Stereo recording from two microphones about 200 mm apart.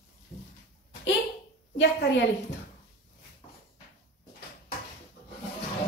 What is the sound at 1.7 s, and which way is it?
Speech, 60° left (ahead or behind).